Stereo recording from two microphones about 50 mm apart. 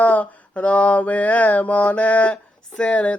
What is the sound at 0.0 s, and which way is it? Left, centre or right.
Mantra, left.